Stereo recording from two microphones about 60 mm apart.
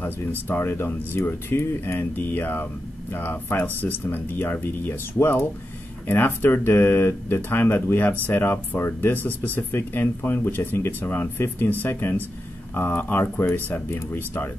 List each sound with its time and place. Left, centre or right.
0.0 s speech: left